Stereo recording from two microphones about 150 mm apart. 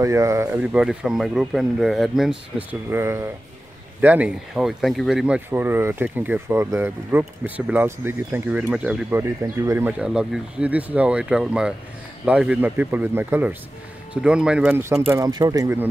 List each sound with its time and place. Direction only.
0.0 s speech: 20° right (ahead or behind)
0.6 s speech: 5° right (ahead or behind)